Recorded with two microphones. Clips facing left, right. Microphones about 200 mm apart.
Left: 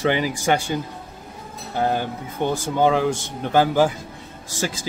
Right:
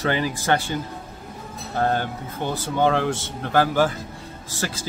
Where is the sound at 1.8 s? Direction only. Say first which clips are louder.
Left 1 dB; 10° left (ahead or behind).